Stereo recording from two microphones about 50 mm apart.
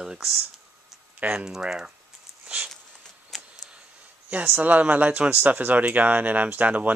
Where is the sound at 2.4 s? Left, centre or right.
Centre.